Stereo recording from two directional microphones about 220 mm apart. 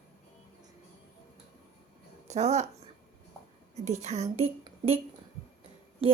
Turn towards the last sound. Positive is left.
turn(degrees=-25)  # may be behind; listen again after turning